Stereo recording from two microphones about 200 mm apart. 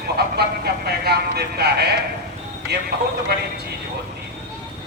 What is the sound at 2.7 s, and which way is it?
Speech, 55° right (ahead or behind).